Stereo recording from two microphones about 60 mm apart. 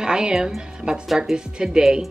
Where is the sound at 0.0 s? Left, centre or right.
Centre.